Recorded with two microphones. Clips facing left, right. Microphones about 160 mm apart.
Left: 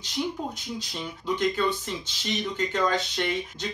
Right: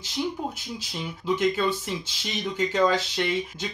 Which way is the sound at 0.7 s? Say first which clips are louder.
Even; 5° right (ahead or behind).